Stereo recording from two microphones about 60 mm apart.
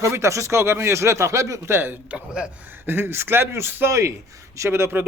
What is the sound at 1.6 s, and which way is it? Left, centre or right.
Speech, right.